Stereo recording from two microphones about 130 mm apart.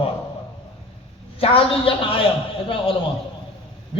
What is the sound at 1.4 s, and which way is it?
Speech, 45° left (ahead or behind).